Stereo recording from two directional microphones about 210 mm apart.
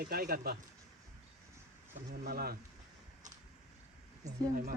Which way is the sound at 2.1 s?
45° right (ahead or behind).